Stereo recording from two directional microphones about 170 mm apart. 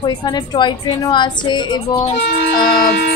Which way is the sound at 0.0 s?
25° left (ahead or behind).